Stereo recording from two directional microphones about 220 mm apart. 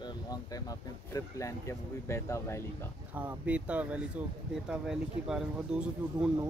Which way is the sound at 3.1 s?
5° right (ahead or behind).